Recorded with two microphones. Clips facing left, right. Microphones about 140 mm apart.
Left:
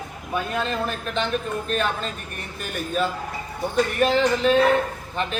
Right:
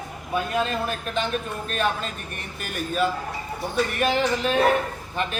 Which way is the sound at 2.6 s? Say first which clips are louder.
Even; centre (ahead or behind).